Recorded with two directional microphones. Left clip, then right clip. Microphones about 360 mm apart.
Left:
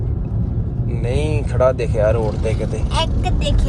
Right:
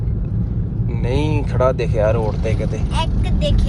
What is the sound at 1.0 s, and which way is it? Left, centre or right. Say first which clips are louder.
Speech: right 1 dB; centre.